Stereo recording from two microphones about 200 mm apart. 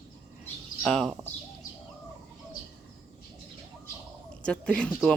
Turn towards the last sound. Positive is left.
turn(degrees=5)  # may be behind; listen again after turning